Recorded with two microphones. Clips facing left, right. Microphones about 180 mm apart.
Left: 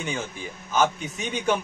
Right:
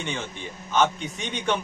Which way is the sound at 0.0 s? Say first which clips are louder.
Left 1 dB; 5° left (ahead or behind).